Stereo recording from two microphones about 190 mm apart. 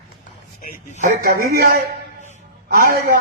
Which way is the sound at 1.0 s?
45° right (ahead or behind).